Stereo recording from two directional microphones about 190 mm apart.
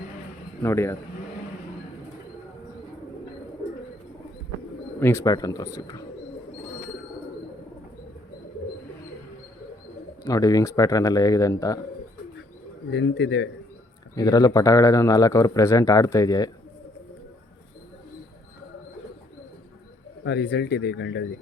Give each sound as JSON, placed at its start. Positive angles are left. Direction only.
{"t": 0.6, "sound": "speech", "side_deg": 15}
{"t": 4.9, "sound": "speech", "side_deg": 10}
{"t": 10.2, "sound": "speech", "side_deg": 20}
{"t": 12.9, "sound": "speech", "side_deg": 70}
{"t": 14.2, "sound": "speech", "side_deg": 20}
{"t": 20.2, "sound": "speech", "side_deg": 60}